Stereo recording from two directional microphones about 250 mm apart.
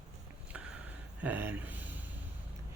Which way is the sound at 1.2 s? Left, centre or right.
Centre.